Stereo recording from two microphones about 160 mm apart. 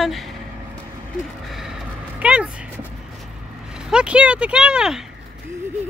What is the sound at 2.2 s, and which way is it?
Speech, 10° right (ahead or behind).